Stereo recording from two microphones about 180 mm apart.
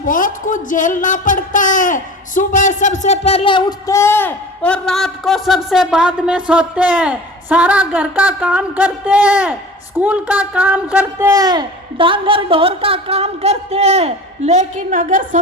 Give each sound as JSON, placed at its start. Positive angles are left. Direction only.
{"t": 0.0, "sound": "speech", "side_deg": 50}
{"t": 11.3, "sound": "speech", "side_deg": -20}